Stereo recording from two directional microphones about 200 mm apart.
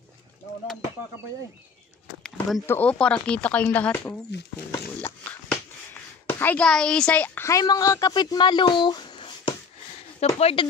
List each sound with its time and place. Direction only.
2.2 s speech: 5° left (ahead or behind)
4.3 s speech: 60° left (ahead or behind)
6.2 s speech: 10° left (ahead or behind); by 10.7 s 30° left (ahead or behind)